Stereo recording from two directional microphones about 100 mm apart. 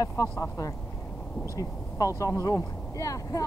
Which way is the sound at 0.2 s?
35° left (ahead or behind).